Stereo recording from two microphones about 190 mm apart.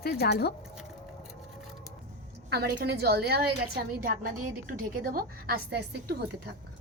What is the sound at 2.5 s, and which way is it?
Speech, 60° right (ahead or behind).